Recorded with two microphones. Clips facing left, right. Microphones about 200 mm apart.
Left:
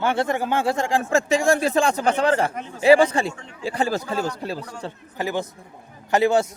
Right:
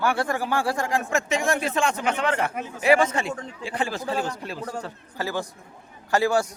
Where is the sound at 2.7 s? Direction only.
30° left (ahead or behind).